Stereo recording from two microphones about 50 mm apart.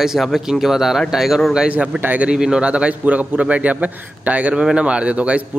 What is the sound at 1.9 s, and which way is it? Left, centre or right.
Speech, right.